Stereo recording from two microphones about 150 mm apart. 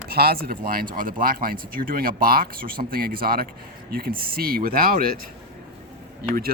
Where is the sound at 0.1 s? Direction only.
90° right.